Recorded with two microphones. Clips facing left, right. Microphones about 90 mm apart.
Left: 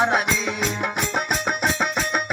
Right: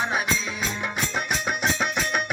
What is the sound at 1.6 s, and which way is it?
Music, 40° left (ahead or behind).